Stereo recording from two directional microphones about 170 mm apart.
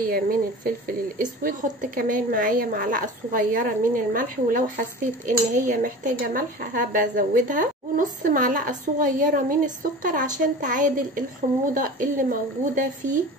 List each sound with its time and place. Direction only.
0.0 s speech: 60° right (ahead or behind)